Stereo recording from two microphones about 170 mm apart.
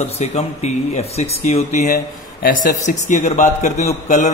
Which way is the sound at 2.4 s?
55° left (ahead or behind).